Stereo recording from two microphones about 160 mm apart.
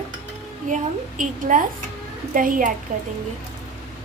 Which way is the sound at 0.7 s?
55° right (ahead or behind).